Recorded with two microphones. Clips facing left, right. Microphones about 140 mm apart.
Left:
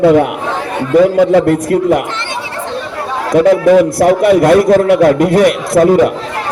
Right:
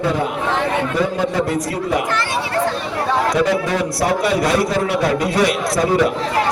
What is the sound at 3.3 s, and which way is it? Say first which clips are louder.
A man's voice: left 10 dB; 55° left (ahead or behind).